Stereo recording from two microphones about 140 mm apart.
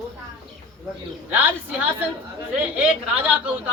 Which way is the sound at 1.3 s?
10° right (ahead or behind).